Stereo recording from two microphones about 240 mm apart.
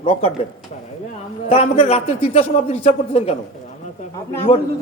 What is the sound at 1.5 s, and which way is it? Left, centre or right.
A woman's voice, left.